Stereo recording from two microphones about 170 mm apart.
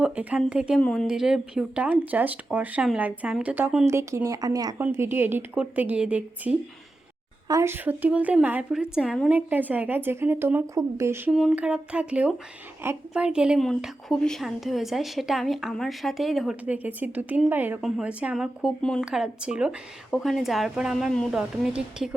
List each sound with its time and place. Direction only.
0.0 s a woman's voice: 5° right (ahead or behind)
7.4 s a woman's voice: 20° right (ahead or behind)
11.3 s a woman's voice: centre (ahead or behind)